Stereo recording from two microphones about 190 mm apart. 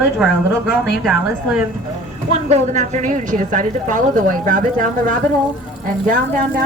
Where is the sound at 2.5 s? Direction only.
35° right (ahead or behind).